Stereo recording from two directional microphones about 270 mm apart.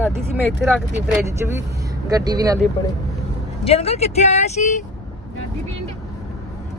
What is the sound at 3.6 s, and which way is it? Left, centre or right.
Speech, left.